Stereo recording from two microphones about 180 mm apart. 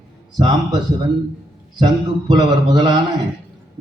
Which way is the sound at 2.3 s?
25° right (ahead or behind).